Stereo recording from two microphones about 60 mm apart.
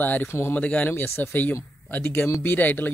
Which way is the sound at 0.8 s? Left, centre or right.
Left.